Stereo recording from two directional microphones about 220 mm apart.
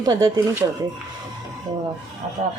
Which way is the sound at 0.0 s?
15° right (ahead or behind).